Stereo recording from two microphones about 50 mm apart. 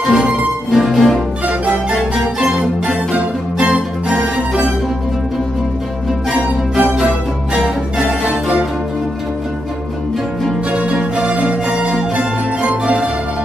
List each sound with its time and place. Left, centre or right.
0.0 s music: centre
1.5 s music: right
3.1 s music: centre
6.3 s music: centre
10.7 s music: right